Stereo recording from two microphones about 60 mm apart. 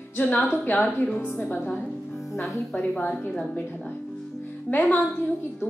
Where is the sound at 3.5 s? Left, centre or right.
Left.